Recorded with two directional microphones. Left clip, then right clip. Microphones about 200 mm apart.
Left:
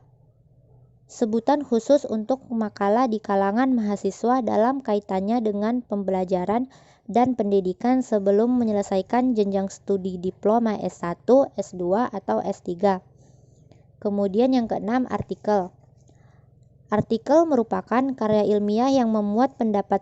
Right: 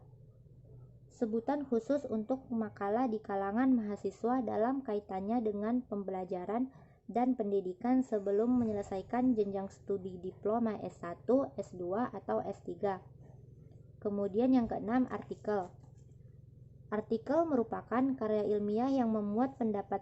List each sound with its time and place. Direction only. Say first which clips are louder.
1.1 s a woman's voice: left 13 dB; 40° left (ahead or behind)
14.0 s a woman's voice: left 11 dB; 35° left (ahead or behind)
16.9 s a woman's voice: left 13 dB; 35° left (ahead or behind)